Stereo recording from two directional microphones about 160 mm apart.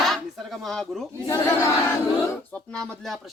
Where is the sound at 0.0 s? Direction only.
Centre (ahead or behind).